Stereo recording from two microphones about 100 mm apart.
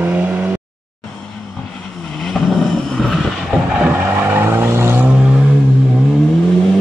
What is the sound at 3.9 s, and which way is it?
Vehicle, 20° right (ahead or behind).